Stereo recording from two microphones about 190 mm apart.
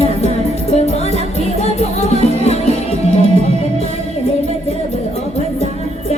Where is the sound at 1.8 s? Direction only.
35° left (ahead or behind).